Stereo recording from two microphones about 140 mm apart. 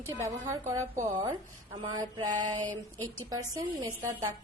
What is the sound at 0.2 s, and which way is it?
Speech, 20° right (ahead or behind).